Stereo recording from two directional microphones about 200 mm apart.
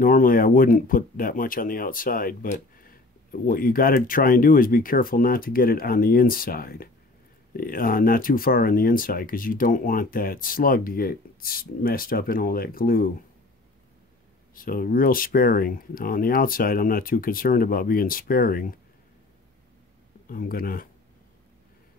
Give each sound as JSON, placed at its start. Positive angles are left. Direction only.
{"t": 0.0, "sound": "speech", "side_deg": 45}
{"t": 14.5, "sound": "speech", "side_deg": 45}
{"t": 20.2, "sound": "speech", "side_deg": 45}